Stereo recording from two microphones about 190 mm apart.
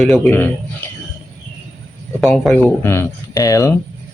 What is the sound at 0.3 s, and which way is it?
Speech, 10° left (ahead or behind).